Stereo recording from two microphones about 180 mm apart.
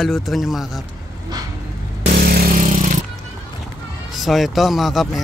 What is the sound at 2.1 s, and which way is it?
Vehicle, 60° right (ahead or behind).